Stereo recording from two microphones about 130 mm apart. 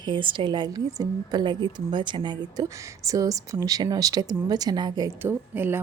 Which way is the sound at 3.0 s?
25° right (ahead or behind).